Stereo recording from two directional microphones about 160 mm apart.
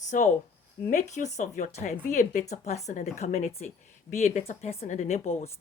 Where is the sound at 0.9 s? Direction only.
50° left (ahead or behind).